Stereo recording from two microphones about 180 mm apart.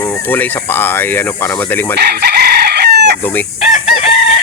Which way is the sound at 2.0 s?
60° right (ahead or behind).